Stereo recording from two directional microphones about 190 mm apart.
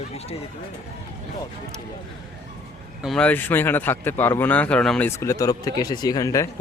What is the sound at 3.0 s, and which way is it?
A man's voice, 5° left (ahead or behind).